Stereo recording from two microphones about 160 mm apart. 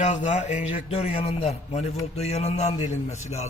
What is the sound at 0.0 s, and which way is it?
A man's voice, 50° left (ahead or behind).